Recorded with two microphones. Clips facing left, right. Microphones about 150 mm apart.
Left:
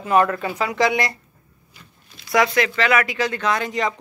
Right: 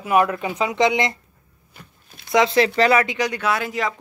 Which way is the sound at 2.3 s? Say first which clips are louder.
Right 2 dB; 25° right (ahead or behind).